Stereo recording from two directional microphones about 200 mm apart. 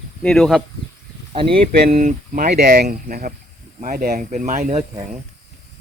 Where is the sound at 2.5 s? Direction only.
50° right (ahead or behind).